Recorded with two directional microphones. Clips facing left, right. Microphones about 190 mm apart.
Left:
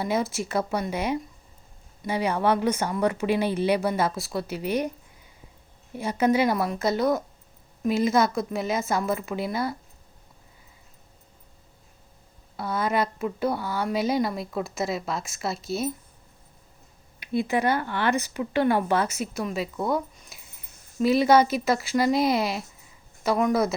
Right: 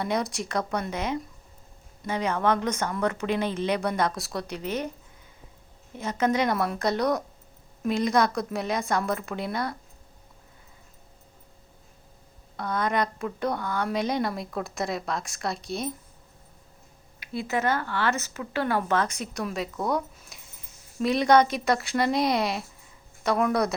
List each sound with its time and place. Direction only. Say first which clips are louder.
0.0 s speech: left 2 dB; 5° left (ahead or behind)
6.0 s a woman's voice: left 3 dB; 10° left (ahead or behind)
12.5 s a woman's voice: left 1 dB; 5° left (ahead or behind)
17.2 s a woman's voice: left 4 dB; 15° left (ahead or behind); by 23.7 s centre (ahead or behind)